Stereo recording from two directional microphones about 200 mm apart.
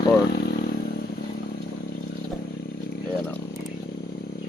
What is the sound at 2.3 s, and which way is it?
Vehicle, centre (ahead or behind).